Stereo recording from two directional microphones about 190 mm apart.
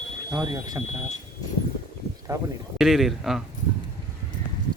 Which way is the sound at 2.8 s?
Centre (ahead or behind).